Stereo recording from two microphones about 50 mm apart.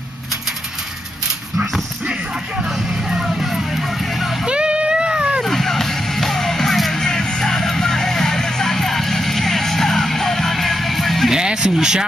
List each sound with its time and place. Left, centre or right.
2.9 s music: centre
4.5 s a sound: right
5.4 s music: centre
11.3 s speech: centre